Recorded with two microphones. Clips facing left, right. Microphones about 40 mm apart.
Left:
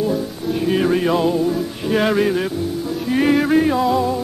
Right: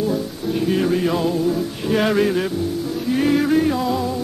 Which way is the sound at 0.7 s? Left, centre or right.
Centre.